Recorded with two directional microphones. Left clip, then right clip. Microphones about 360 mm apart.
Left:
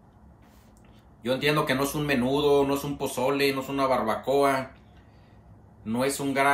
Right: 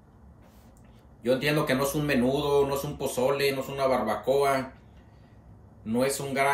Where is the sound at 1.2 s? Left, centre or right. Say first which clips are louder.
Left 1 dB; centre.